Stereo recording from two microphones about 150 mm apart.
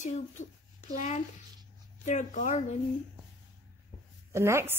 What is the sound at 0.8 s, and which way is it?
Speech, 50° left (ahead or behind).